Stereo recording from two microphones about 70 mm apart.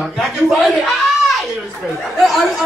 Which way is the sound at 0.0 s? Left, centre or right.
Centre.